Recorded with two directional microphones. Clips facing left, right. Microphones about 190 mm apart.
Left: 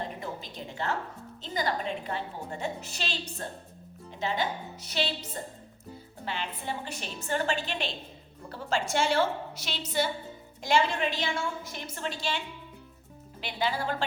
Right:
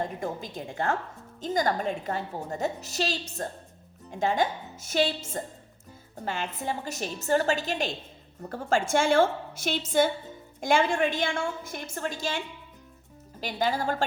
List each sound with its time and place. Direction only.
0.0 s a sound: 50° right (ahead or behind)
1.4 s a woman's voice: 45° right (ahead or behind)
13.4 s a woman's voice: 45° right (ahead or behind)